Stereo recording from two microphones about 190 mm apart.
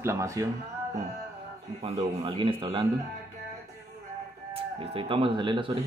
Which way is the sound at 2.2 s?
25° right (ahead or behind).